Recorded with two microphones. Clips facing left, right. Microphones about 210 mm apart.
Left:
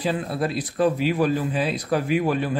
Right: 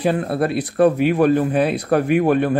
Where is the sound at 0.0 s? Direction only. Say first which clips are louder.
Right 6 dB; 60° right (ahead or behind).